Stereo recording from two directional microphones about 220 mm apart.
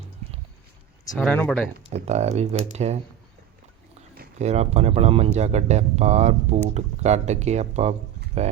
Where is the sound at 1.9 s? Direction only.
30° right (ahead or behind).